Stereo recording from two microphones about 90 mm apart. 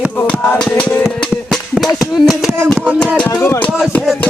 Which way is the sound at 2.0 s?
Centre (ahead or behind).